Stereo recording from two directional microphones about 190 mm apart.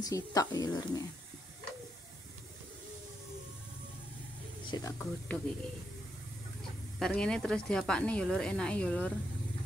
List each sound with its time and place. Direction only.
0.0 s speech: 20° left (ahead or behind)
4.6 s speech: 20° left (ahead or behind)
7.0 s speech: 5° left (ahead or behind)